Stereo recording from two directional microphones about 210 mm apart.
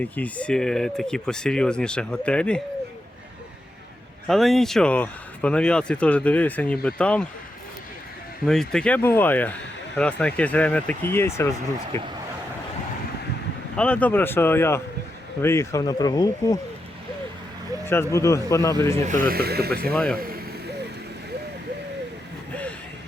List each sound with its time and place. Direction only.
0.0 s speech: 5° left (ahead or behind)
4.3 s speech: centre (ahead or behind)
8.4 s speech: 5° left (ahead or behind)
13.7 s speech: 5° left (ahead or behind)
17.8 s speech: 10° left (ahead or behind)
19.0 s speech: 40° right (ahead or behind)
19.9 s speech: centre (ahead or behind)
20.1 s vehicle: 45° right (ahead or behind)